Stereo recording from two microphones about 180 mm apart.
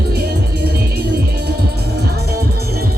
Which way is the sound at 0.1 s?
60° right (ahead or behind).